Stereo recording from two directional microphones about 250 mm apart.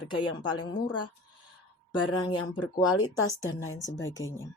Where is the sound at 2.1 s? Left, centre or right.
Centre.